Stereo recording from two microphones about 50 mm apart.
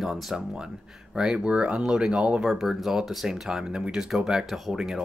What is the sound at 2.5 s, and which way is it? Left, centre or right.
Speech, centre.